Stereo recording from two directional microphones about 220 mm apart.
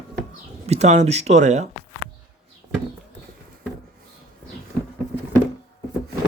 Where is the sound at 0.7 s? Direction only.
30° right (ahead or behind).